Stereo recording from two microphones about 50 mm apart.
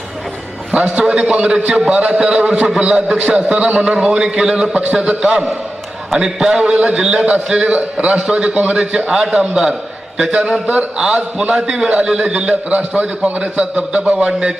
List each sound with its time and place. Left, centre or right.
0.7 s a man's voice: right
10.9 s a man's voice: centre